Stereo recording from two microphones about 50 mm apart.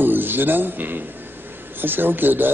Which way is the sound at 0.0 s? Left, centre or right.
Right.